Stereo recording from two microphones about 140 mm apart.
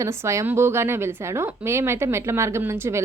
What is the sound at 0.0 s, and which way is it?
A woman's voice, 20° right (ahead or behind).